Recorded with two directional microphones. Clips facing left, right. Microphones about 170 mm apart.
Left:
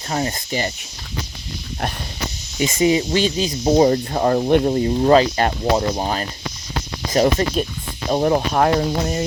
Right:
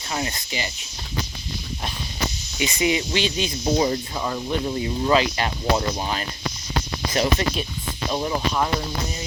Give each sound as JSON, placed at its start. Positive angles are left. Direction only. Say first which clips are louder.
{"t": 0.1, "sound": "speech", "louder": "left 6 dB", "side_deg": 40}
{"t": 2.6, "sound": "speech", "louder": "left 6 dB", "side_deg": 40}
{"t": 4.7, "sound": "speech", "louder": "left 7 dB", "side_deg": 40}
{"t": 5.7, "sound": "speech", "louder": "left 4 dB", "side_deg": 35}
{"t": 8.1, "sound": "speech", "louder": "left 7 dB", "side_deg": 55}